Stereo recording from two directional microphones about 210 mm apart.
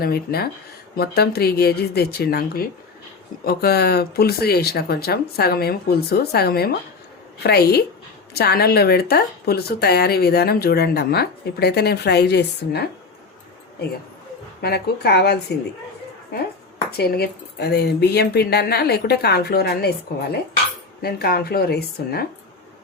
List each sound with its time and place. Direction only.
0.0 s a woman's voice: 45° left (ahead or behind)
14.6 s a woman's voice: 50° left (ahead or behind)
17.0 s a woman's voice: 50° left (ahead or behind)
21.0 s a woman's voice: 45° left (ahead or behind)